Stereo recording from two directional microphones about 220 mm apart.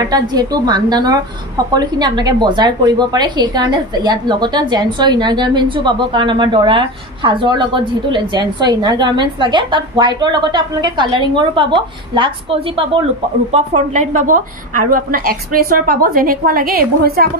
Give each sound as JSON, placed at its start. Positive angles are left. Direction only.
{"t": 0.0, "sound": "a woman's voice", "side_deg": -20}